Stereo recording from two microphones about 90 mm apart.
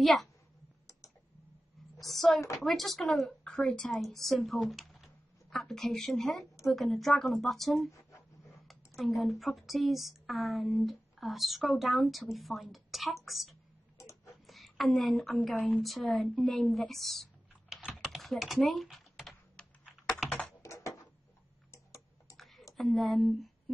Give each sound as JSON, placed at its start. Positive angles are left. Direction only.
{"t": 0.0, "sound": "speech", "side_deg": 0}
{"t": 2.0, "sound": "a woman's voice", "side_deg": 5}
{"t": 13.9, "sound": "a sound", "side_deg": 30}
{"t": 14.4, "sound": "a sound", "side_deg": 0}
{"t": 15.2, "sound": "a woman's voice", "side_deg": 0}
{"t": 18.0, "sound": "typing", "side_deg": 0}
{"t": 20.2, "sound": "computer keyboard", "side_deg": 15}
{"t": 20.6, "sound": "a sound", "side_deg": 35}
{"t": 21.7, "sound": "tick-tock", "side_deg": 35}
{"t": 22.4, "sound": "computer keyboard", "side_deg": 0}
{"t": 22.8, "sound": "a woman's voice", "side_deg": 0}